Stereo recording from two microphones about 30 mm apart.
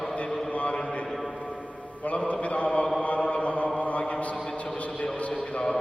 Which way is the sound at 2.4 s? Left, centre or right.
Left.